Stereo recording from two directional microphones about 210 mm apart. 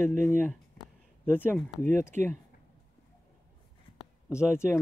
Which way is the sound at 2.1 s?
35° right (ahead or behind).